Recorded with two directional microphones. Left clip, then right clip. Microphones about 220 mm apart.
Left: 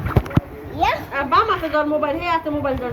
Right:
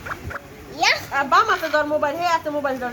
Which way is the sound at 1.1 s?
50° right (ahead or behind).